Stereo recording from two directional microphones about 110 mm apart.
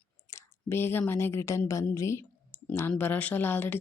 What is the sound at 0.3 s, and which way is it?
Speech, 25° left (ahead or behind).